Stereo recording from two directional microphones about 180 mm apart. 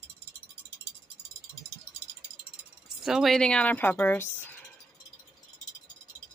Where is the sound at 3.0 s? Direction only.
Centre (ahead or behind).